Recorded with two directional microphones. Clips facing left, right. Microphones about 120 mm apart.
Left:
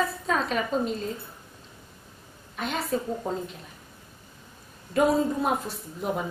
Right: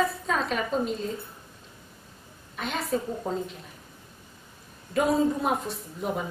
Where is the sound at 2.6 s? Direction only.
Centre (ahead or behind).